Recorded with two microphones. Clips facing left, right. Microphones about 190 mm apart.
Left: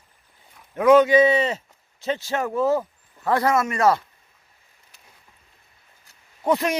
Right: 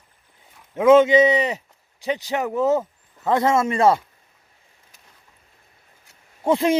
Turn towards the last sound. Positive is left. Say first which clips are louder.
# right 3 dB
turn(degrees=-25)  # may be behind; listen again after turning